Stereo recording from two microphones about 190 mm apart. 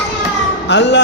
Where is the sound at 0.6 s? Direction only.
65° left (ahead or behind).